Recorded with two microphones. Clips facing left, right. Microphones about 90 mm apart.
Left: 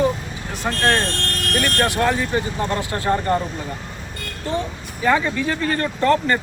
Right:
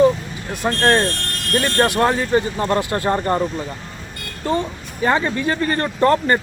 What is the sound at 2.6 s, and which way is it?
Speech, 35° right (ahead or behind).